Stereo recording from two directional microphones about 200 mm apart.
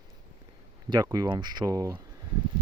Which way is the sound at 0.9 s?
20° right (ahead or behind).